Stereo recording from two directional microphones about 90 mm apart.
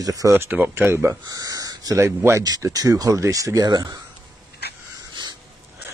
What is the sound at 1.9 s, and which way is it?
Speech, 30° right (ahead or behind).